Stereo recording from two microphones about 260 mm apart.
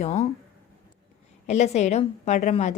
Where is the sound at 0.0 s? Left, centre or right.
Left.